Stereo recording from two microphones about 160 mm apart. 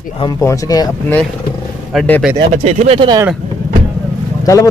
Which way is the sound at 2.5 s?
40° right (ahead or behind).